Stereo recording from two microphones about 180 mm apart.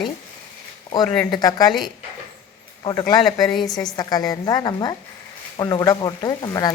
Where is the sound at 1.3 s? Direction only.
20° left (ahead or behind).